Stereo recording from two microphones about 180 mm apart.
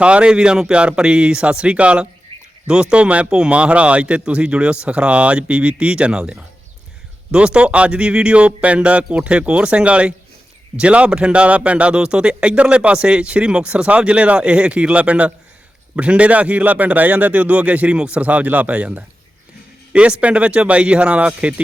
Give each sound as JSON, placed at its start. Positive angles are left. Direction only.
{"t": 0.0, "sound": "speech", "side_deg": -5}
{"t": 2.3, "sound": "a sound", "side_deg": -30}
{"t": 2.6, "sound": "speech", "side_deg": -5}